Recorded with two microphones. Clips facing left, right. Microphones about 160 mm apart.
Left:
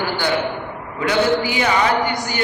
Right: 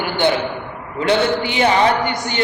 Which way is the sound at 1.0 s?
30° right (ahead or behind).